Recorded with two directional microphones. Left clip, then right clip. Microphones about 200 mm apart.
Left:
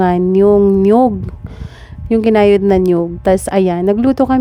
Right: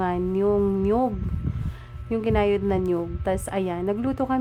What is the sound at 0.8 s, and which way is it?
A woman's voice, 55° left (ahead or behind).